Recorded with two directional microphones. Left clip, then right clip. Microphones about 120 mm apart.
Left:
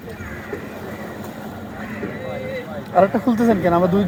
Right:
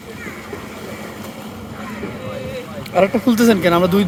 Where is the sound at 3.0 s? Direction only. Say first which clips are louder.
Even; 35° right (ahead or behind).